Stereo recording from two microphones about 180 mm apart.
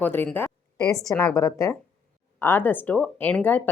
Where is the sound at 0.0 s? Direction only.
10° left (ahead or behind).